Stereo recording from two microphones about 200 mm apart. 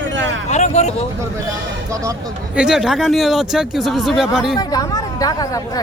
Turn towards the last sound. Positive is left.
turn(degrees=15)  # may be behind; listen again after turning